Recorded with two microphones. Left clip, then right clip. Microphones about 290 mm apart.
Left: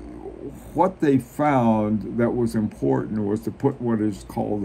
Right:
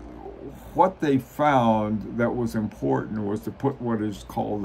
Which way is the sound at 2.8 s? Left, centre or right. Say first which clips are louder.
Left 2 dB; right.